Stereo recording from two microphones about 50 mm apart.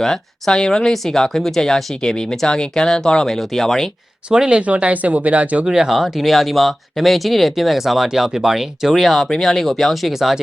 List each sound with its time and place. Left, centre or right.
0.0 s speech: centre
4.3 s speech: centre
5.6 s speech: centre
5.9 s speech: centre